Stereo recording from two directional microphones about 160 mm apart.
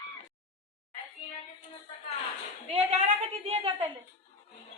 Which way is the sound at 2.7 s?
40° right (ahead or behind).